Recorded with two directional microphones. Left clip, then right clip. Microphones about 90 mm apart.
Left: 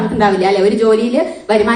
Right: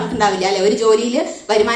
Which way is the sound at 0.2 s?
35° right (ahead or behind).